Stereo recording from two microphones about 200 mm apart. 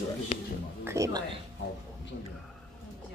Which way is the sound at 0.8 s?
15° right (ahead or behind).